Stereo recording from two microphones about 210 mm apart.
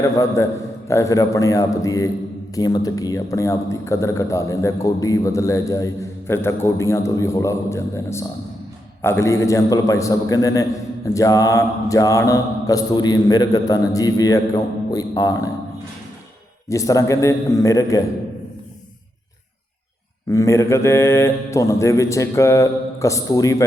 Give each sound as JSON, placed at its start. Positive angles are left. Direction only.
{"t": 0.0, "sound": "a man's voice", "side_deg": 15}
{"t": 16.6, "sound": "a man's voice", "side_deg": 15}
{"t": 20.3, "sound": "a man's voice", "side_deg": 15}